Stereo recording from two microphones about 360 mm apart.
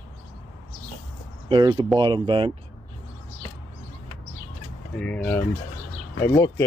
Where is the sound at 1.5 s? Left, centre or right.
Centre.